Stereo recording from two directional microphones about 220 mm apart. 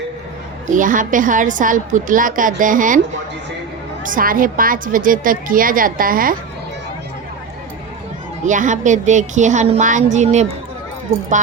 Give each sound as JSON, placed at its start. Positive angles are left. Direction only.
{"t": 0.7, "sound": "a woman's voice", "side_deg": -35}
{"t": 4.0, "sound": "a woman's voice", "side_deg": -40}
{"t": 8.4, "sound": "a woman's voice", "side_deg": -35}